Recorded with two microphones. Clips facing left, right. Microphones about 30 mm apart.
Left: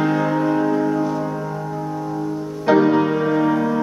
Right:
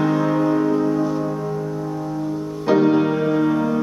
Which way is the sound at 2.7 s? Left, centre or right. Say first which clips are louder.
Left 1 dB; centre.